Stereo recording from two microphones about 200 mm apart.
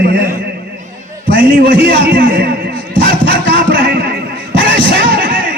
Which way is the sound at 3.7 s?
45° right (ahead or behind).